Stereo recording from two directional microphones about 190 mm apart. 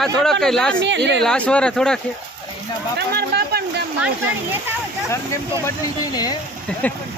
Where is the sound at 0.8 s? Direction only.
70° right (ahead or behind).